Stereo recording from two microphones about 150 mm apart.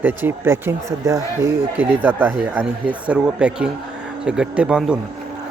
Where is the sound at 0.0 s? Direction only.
15° right (ahead or behind).